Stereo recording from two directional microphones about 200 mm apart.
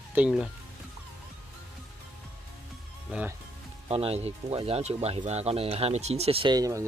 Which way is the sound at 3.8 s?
30° right (ahead or behind).